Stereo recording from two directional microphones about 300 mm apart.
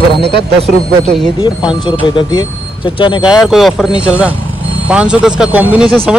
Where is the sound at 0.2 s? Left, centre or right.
Right.